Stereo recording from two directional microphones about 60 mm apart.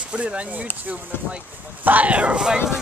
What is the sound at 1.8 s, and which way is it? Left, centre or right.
Speech, right.